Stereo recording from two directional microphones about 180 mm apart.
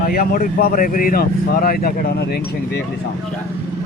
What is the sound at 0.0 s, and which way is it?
Speech, 55° left (ahead or behind).